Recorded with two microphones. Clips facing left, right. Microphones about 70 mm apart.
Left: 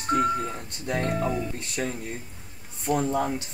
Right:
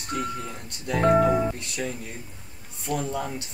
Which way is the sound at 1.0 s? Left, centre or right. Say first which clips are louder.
Right 9 dB; right.